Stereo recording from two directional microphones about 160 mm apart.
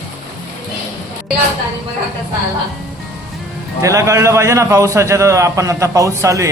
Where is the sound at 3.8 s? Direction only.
20° right (ahead or behind).